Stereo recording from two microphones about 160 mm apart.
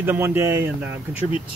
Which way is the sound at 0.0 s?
15° right (ahead or behind).